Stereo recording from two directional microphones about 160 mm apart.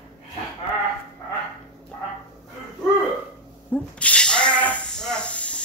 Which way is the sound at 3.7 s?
10° left (ahead or behind).